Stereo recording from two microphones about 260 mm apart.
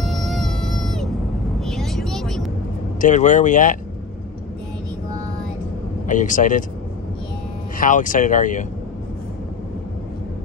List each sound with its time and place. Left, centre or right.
0.0 s a sound: centre
1.6 s vehicle: centre
3.0 s speech: left
6.0 s speech: left
7.7 s speech: left